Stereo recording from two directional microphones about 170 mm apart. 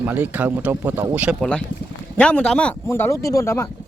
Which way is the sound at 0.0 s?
10° right (ahead or behind).